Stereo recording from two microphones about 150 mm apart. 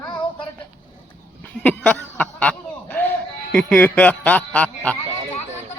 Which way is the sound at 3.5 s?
10° left (ahead or behind).